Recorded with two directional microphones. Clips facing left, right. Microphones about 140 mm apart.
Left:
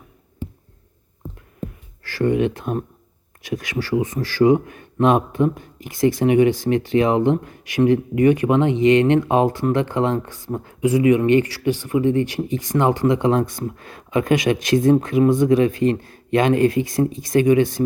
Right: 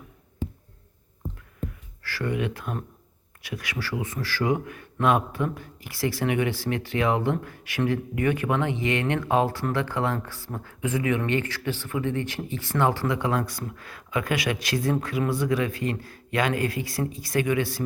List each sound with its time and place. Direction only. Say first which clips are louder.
2.0 s speech: left 9 dB; 20° left (ahead or behind)